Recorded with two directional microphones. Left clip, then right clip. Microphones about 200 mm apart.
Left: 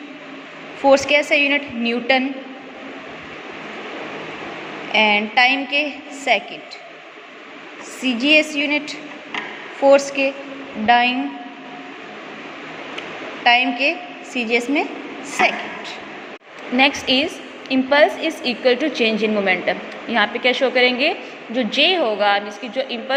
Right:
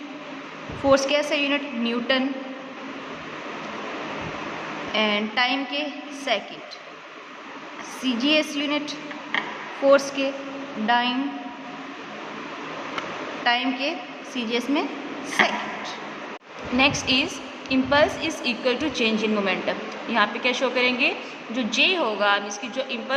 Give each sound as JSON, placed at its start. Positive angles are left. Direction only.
{"t": 0.9, "sound": "a woman's voice", "side_deg": 20}
{"t": 4.9, "sound": "a woman's voice", "side_deg": 20}
{"t": 8.0, "sound": "a woman's voice", "side_deg": 20}
{"t": 13.4, "sound": "a woman's voice", "side_deg": 20}
{"t": 16.7, "sound": "a woman's voice", "side_deg": 20}